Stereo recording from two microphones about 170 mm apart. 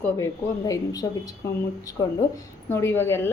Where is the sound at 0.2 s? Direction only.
20° left (ahead or behind).